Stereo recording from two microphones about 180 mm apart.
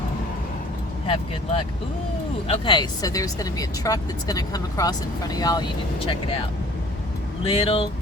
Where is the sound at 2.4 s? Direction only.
30° left (ahead or behind).